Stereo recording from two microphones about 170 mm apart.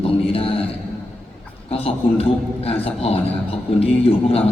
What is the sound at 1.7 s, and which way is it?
A man's voice, 35° left (ahead or behind).